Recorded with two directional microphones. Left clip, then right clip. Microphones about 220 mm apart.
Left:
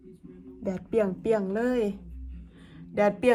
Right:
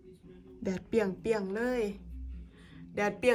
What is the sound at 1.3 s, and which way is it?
Speech, 35° right (ahead or behind).